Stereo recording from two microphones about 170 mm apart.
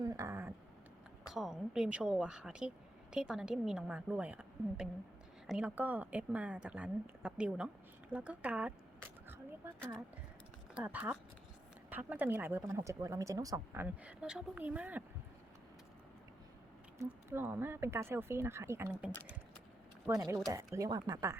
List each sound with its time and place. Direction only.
0.0 s a sound: 20° right (ahead or behind)
1.3 s a woman's voice: centre (ahead or behind)
10.8 s a woman's voice: 10° right (ahead or behind)
13.8 s a woman's voice: 10° right (ahead or behind)
17.0 s a woman's voice: 10° right (ahead or behind)